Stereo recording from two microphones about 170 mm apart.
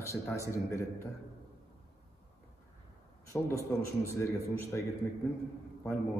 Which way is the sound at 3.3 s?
15° left (ahead or behind).